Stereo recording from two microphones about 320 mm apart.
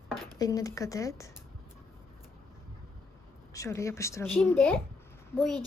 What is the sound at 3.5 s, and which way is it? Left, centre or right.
A woman's voice, centre.